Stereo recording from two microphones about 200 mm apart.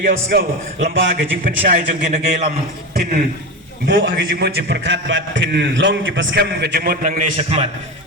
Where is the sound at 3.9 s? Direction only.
70° right (ahead or behind).